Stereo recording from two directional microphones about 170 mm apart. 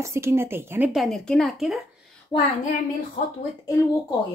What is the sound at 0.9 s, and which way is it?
Speech, centre (ahead or behind).